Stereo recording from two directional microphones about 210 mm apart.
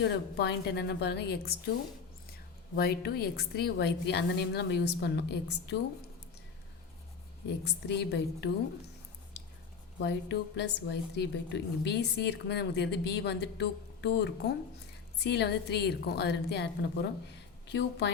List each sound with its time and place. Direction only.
0.0 s a woman's voice: 55° left (ahead or behind)
2.7 s a woman's voice: 50° left (ahead or behind)
7.4 s a woman's voice: 55° left (ahead or behind)
10.0 s a woman's voice: 55° left (ahead or behind)